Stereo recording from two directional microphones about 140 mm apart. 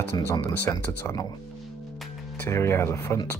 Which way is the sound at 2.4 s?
20° left (ahead or behind).